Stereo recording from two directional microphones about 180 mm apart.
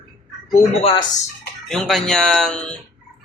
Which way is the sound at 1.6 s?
Centre (ahead or behind).